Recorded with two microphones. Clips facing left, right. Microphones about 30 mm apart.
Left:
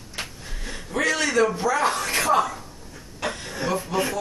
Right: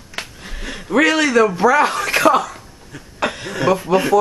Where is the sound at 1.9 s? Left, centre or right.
Right.